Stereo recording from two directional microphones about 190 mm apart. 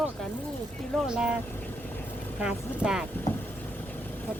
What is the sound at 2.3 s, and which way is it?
Speech, 5° right (ahead or behind).